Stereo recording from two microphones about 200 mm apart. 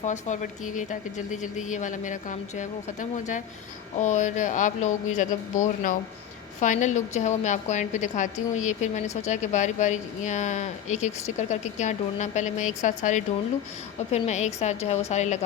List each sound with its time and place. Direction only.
0.0 s a woman's voice: 35° left (ahead or behind)